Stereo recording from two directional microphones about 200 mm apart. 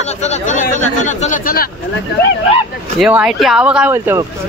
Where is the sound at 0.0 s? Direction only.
35° left (ahead or behind).